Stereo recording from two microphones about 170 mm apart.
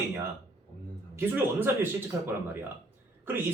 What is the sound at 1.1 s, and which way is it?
A man's voice, 15° right (ahead or behind).